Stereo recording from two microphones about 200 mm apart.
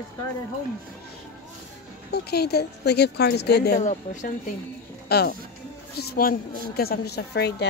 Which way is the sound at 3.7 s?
35° left (ahead or behind).